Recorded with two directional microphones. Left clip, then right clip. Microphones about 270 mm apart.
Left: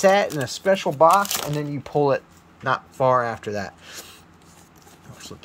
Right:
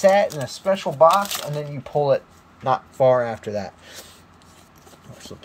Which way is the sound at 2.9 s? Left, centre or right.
Centre.